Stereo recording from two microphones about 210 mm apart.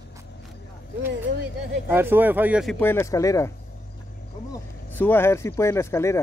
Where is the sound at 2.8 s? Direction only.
10° left (ahead or behind).